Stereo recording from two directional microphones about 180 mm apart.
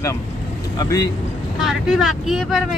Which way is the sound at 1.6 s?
Centre (ahead or behind).